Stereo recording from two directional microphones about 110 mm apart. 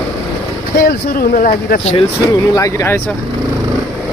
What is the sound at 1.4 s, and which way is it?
Speech, 70° left (ahead or behind).